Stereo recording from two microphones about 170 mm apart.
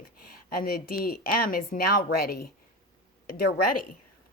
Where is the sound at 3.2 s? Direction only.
60° left (ahead or behind).